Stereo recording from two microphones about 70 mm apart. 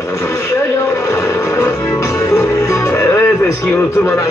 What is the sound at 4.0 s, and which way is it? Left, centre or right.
Radio, left.